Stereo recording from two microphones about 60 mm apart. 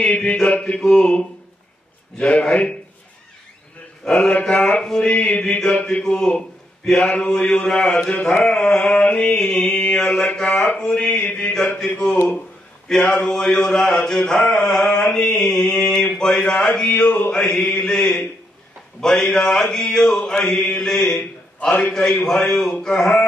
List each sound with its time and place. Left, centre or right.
0.0 s mantra: centre
2.1 s a man's voice: centre
4.0 s mantra: centre
4.3 s a man's voice: left
4.8 s mantra: centre
11.1 s a sound: left
12.8 s mantra: centre
17.3 s a man's voice: centre
19.3 s mantra: centre
21.2 s a sound: centre
21.9 s mantra: centre